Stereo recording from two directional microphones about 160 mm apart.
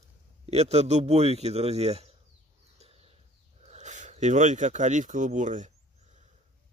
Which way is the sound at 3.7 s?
45° right (ahead or behind).